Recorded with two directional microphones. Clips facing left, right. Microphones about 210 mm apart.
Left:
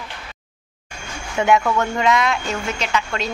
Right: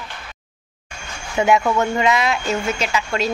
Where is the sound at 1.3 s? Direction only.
5° right (ahead or behind).